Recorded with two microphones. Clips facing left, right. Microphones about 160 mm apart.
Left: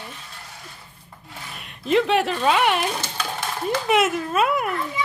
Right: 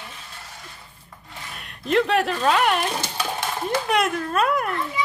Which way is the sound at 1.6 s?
Centre (ahead or behind).